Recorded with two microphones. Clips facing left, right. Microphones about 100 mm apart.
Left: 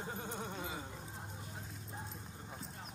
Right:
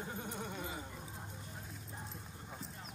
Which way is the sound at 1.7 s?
Centre (ahead or behind).